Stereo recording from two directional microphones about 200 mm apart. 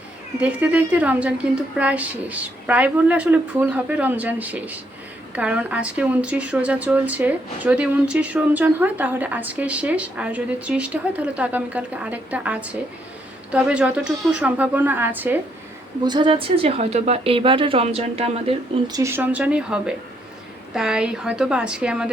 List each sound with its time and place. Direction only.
0.3 s speech: 5° right (ahead or behind)
16.0 s a woman's voice: 25° right (ahead or behind); by 22.1 s 5° right (ahead or behind)